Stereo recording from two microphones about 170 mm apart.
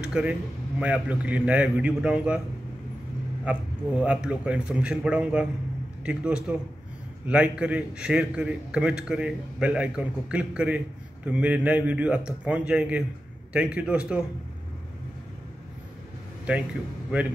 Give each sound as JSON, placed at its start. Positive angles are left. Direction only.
{"t": 0.1, "sound": "a man's voice", "side_deg": -5}
{"t": 3.4, "sound": "a man's voice", "side_deg": -10}